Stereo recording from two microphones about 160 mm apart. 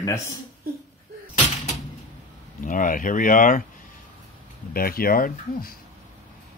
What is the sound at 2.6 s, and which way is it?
Speech, 55° left (ahead or behind).